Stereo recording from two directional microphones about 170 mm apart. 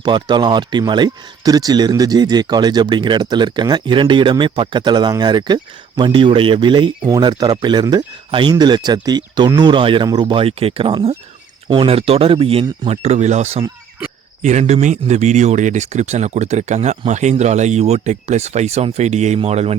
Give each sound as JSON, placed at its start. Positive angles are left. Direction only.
{"t": 0.0, "sound": "speech", "side_deg": -25}